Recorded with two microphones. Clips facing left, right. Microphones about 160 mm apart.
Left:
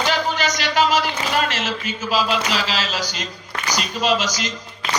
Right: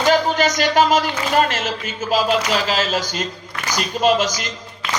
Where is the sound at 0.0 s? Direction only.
45° right (ahead or behind).